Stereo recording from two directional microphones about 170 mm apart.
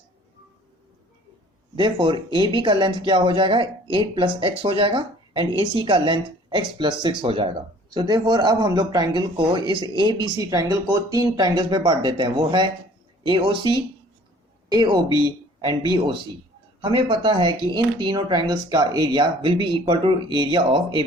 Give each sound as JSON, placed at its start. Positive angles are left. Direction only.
{"t": 1.7, "sound": "speech", "side_deg": -30}